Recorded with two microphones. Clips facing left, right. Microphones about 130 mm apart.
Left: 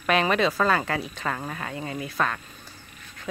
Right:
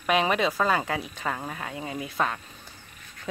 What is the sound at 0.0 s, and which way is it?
Speech, 15° right (ahead or behind).